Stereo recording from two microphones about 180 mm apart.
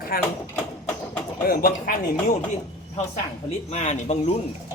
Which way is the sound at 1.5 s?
55° left (ahead or behind).